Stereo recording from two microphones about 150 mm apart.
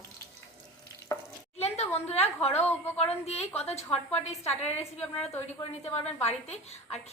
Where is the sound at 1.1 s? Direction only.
20° left (ahead or behind).